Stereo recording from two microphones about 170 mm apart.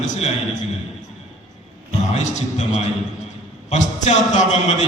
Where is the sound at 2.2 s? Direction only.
45° left (ahead or behind).